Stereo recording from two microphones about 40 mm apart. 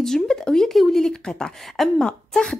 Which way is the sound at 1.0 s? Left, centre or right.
Centre.